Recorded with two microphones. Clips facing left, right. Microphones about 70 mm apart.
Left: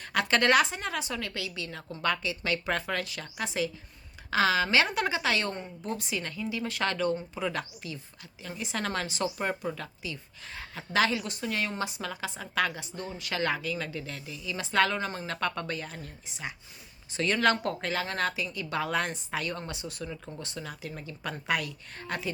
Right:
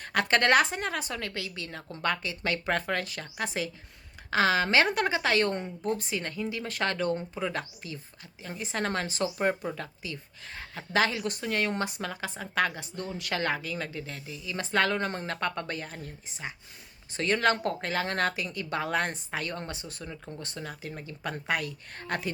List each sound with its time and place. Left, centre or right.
0.0 s a woman's voice: right
15.4 s a woman's voice: right
17.2 s a woman's voice: right
20.0 s speech: centre
20.4 s a woman's voice: right
21.9 s speech: right